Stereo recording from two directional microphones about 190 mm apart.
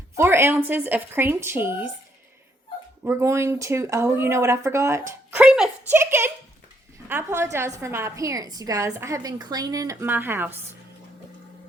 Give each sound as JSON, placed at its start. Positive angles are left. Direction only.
{"t": 0.2, "sound": "a woman's voice", "side_deg": -15}
{"t": 3.0, "sound": "a woman's voice", "side_deg": -15}
{"t": 5.4, "sound": "a woman's voice", "side_deg": 0}